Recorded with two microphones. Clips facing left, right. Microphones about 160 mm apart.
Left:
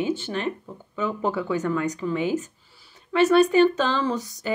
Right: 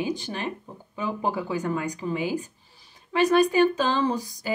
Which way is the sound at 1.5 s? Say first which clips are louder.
Left 3 dB; 10° right (ahead or behind).